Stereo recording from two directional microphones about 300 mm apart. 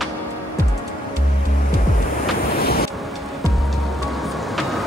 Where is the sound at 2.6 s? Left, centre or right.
Left.